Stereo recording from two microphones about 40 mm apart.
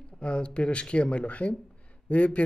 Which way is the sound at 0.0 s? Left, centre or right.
Left.